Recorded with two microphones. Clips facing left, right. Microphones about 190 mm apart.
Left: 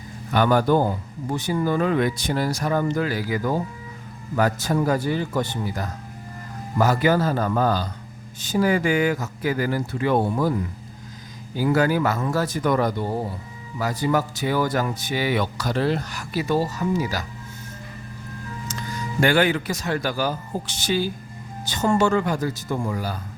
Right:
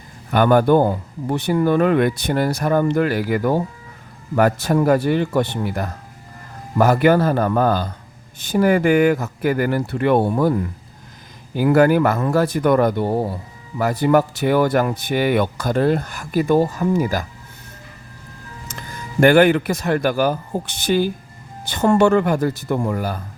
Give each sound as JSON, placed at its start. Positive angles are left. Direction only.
{"t": 0.3, "sound": "a man's voice", "side_deg": -55}
{"t": 11.5, "sound": "a man's voice", "side_deg": -55}
{"t": 18.7, "sound": "a man's voice", "side_deg": -55}